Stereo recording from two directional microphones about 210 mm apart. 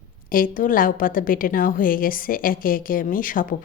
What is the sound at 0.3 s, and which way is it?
A woman's voice, 40° left (ahead or behind).